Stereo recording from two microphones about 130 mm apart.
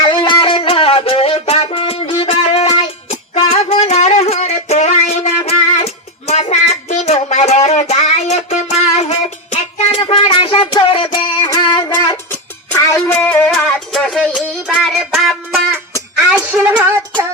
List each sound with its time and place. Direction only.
0.0 s music: 35° left (ahead or behind); by 10.0 s 60° left (ahead or behind)
10.0 s music: 40° left (ahead or behind)
11.1 s music: 30° left (ahead or behind)
12.3 s music: 25° left (ahead or behind)
13.1 s music: 10° left (ahead or behind)
16.6 s a sound: 10° right (ahead or behind)